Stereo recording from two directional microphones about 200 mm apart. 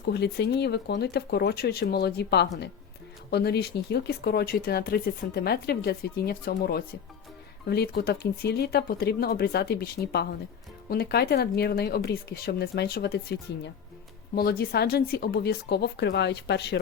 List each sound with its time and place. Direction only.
0.0 s speech: 55° left (ahead or behind)